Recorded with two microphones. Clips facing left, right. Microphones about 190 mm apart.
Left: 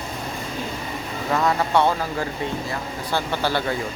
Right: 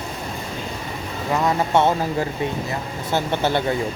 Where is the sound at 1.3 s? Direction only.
20° right (ahead or behind).